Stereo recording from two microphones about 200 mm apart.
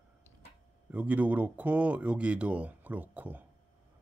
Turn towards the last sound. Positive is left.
turn(degrees=-10)  # may be behind; listen again after turning